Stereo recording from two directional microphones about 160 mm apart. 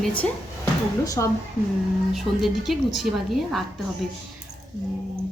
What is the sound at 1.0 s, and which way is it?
Speech, 20° left (ahead or behind).